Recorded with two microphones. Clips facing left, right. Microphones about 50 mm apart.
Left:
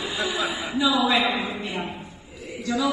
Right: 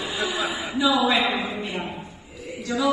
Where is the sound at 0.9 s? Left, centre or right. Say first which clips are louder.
Right 1 dB; right.